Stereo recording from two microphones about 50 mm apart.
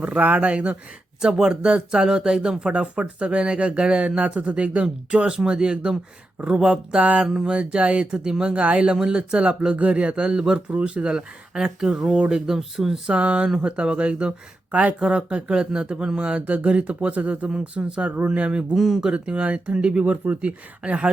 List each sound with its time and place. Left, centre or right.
0.0 s speech: right
1.2 s speech: centre
7.3 s speech: centre
7.5 s speech: right; by 13.0 s centre
13.1 s speech: right
18.7 s speech: centre
19.1 s speech: right